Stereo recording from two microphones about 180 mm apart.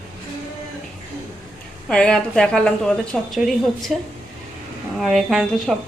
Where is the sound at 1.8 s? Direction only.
5° left (ahead or behind).